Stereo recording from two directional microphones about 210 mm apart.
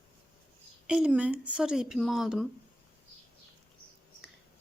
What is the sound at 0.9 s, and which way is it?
Speech, 5° right (ahead or behind).